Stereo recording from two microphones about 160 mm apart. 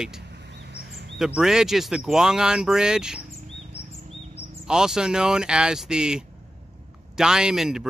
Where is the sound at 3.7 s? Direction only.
15° left (ahead or behind).